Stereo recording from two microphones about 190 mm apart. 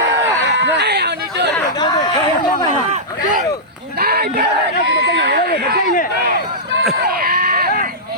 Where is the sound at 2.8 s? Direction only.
35° right (ahead or behind).